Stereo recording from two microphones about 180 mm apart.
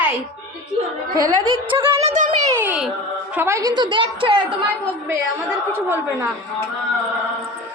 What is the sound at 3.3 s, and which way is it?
A woman's voice, 15° right (ahead or behind).